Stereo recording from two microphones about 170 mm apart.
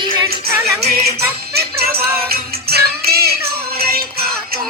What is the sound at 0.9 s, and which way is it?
Music, 65° right (ahead or behind).